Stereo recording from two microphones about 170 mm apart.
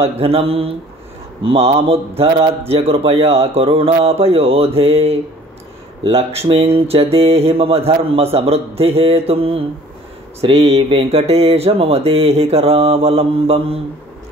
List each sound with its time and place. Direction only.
0.0 s mantra: 35° right (ahead or behind)